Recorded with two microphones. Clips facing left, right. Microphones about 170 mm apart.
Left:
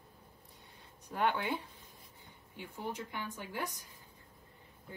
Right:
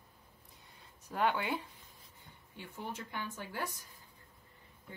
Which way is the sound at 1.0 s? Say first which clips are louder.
Even; centre (ahead or behind).